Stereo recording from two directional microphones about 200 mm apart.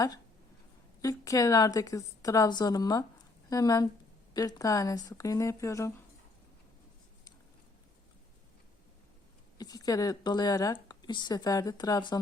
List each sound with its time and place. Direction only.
1.0 s a woman's voice: 15° left (ahead or behind)
9.6 s speech: 20° left (ahead or behind)